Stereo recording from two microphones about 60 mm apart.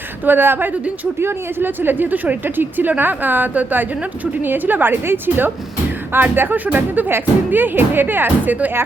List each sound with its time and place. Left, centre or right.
0.3 s speech: right